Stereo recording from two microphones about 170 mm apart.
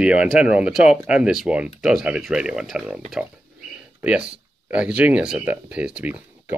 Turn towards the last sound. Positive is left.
turn(degrees=-5)  # may be behind; listen again after turning